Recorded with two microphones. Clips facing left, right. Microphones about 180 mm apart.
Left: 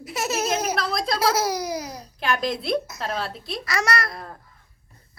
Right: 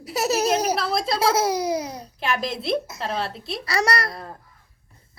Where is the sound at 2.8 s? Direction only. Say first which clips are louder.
Right 1 dB; 30° right (ahead or behind).